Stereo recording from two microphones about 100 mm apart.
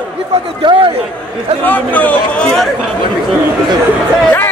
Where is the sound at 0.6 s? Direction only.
50° right (ahead or behind).